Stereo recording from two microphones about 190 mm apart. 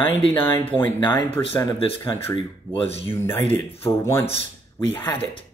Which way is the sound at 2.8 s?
30° left (ahead or behind).